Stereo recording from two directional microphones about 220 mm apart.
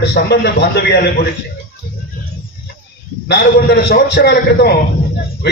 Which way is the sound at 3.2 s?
50° left (ahead or behind).